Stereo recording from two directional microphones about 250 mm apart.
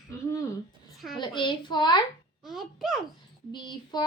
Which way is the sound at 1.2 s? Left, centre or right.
Centre.